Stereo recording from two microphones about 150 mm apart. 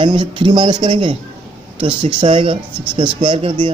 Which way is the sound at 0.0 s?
30° right (ahead or behind).